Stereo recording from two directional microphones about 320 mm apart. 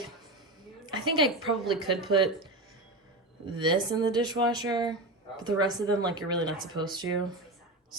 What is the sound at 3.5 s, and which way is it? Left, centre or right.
Speech, centre.